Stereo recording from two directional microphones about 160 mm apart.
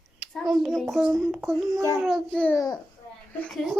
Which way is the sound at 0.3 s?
Centre (ahead or behind).